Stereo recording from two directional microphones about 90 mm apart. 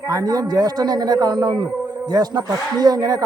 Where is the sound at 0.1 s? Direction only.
45° right (ahead or behind).